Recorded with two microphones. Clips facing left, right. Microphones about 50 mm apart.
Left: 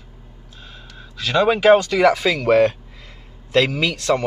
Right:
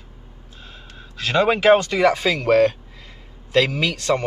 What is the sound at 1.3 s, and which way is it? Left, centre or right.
Speech, centre.